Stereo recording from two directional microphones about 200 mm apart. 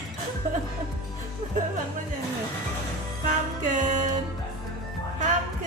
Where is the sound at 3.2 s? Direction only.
40° right (ahead or behind).